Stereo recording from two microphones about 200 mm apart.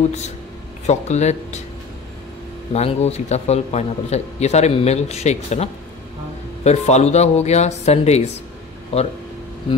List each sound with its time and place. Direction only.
0.8 s speech: 35° left (ahead or behind)
2.7 s speech: 30° left (ahead or behind)